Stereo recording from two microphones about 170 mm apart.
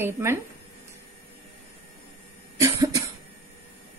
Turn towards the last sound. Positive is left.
turn(degrees=-20)  # may be behind; listen again after turning